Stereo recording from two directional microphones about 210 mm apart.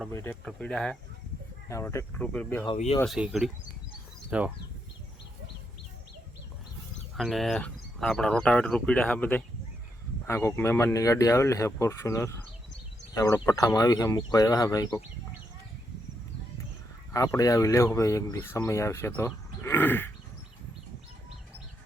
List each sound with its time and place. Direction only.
0.1 s speech: 10° left (ahead or behind)
2.7 s speech: 30° left (ahead or behind)
3.0 s speech: centre (ahead or behind)
7.2 s speech: centre (ahead or behind); by 15.0 s 15° left (ahead or behind)
17.1 s speech: 15° left (ahead or behind)